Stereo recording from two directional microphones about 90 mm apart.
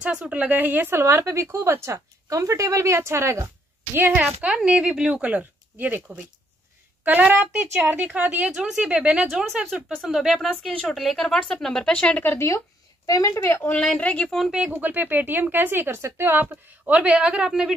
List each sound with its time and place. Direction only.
0.0 s a woman's voice: 10° right (ahead or behind); by 13.7 s 30° left (ahead or behind)
13.7 s speech: 15° left (ahead or behind)
14.7 s a woman's voice: 20° right (ahead or behind); by 17.7 s 5° right (ahead or behind)